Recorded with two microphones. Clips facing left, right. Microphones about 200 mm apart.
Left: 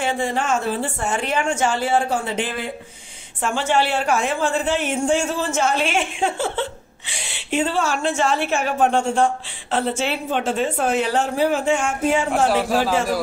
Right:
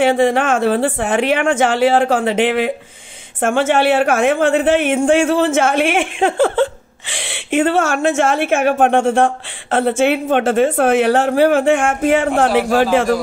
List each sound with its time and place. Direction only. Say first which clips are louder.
0.0 s speech: right 9 dB; 65° right (ahead or behind); by 2.7 s 85° right
3.3 s a woman's voice: right 6 dB; 55° right (ahead or behind)
7.1 s speech: right 7 dB; 90° right
7.5 s a woman's voice: right 6 dB; 60° right (ahead or behind)
11.1 s a woman's voice: right 7 dB; 65° right (ahead or behind)